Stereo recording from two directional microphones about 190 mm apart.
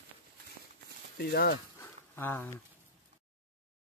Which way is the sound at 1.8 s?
10° left (ahead or behind).